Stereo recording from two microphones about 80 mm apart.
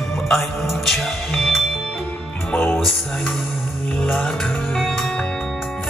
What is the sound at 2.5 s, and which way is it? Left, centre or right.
Music, left.